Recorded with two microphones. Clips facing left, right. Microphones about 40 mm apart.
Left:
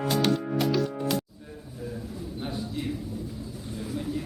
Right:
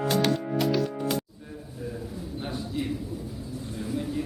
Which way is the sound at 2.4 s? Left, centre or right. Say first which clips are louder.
Right 1 dB; centre.